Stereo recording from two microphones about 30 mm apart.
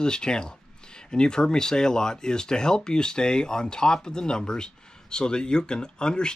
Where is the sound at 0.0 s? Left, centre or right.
Left.